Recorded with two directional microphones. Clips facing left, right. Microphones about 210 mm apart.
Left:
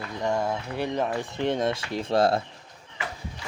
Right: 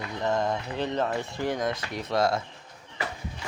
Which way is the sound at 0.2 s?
10° left (ahead or behind).